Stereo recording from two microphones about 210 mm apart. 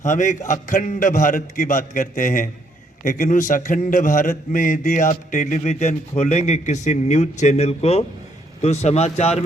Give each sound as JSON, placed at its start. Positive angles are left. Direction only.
{"t": 0.0, "sound": "a man's voice", "side_deg": 35}